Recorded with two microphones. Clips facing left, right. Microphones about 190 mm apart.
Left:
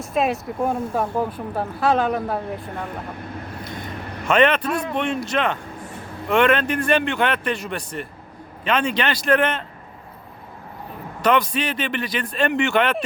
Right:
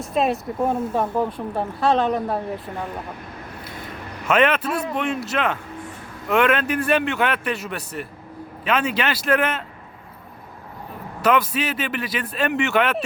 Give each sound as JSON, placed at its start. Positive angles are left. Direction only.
{"t": 0.0, "sound": "speech", "side_deg": 0}
{"t": 4.3, "sound": "speech", "side_deg": -5}
{"t": 11.2, "sound": "speech", "side_deg": -5}